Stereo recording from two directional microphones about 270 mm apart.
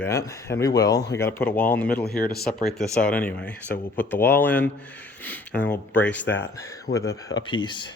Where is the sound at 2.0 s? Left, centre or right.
Left.